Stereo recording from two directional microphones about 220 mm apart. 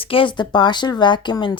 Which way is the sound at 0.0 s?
25° left (ahead or behind).